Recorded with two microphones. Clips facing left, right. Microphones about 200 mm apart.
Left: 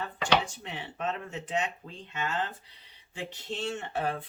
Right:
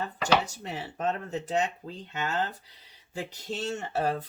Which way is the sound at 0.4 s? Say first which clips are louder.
Right 3 dB; 40° right (ahead or behind).